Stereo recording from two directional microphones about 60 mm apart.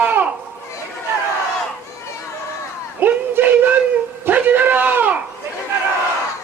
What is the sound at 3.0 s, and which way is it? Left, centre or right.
A man's voice, right.